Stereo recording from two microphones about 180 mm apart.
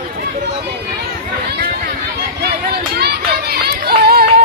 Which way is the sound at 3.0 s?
60° right (ahead or behind).